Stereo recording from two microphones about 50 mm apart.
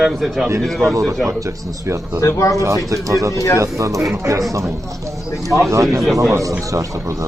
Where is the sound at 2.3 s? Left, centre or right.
Left.